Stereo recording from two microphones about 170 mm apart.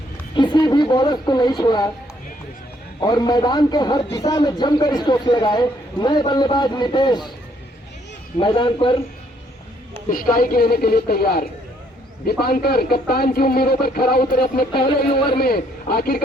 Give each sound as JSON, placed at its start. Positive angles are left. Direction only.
{"t": 0.3, "sound": "a man's voice", "side_deg": 25}
{"t": 3.0, "sound": "a man's voice", "side_deg": 25}
{"t": 8.4, "sound": "a man's voice", "side_deg": 30}
{"t": 10.1, "sound": "speech", "side_deg": 55}
{"t": 14.7, "sound": "a man's voice", "side_deg": 30}
{"t": 15.4, "sound": "speech", "side_deg": 65}